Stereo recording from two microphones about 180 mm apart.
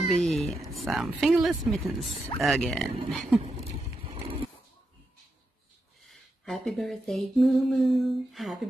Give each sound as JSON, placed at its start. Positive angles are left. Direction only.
{"t": 0.1, "sound": "speech", "side_deg": 0}
{"t": 4.0, "sound": "horse", "side_deg": -30}
{"t": 6.0, "sound": "speech", "side_deg": 0}